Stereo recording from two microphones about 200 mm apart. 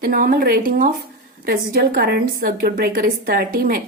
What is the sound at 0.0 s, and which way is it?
A woman's voice, 45° right (ahead or behind).